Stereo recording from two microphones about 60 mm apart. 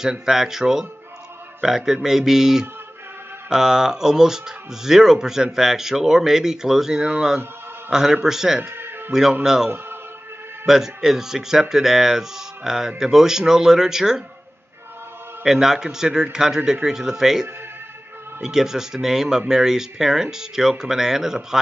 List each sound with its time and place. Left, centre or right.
0.0 s a man's voice: centre
8.6 s music: right
9.4 s speech: centre
10.7 s speech: centre
15.4 s speech: centre